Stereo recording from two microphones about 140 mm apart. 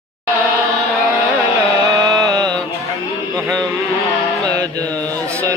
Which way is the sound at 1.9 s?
25° right (ahead or behind).